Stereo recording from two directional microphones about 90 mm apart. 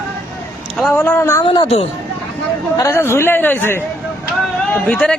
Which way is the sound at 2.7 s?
30° left (ahead or behind).